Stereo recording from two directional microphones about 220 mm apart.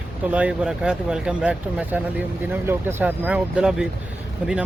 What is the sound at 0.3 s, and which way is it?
Speech, 5° right (ahead or behind).